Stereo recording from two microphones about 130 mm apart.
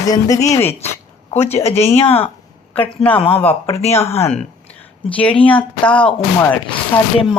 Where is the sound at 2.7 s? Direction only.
15° left (ahead or behind).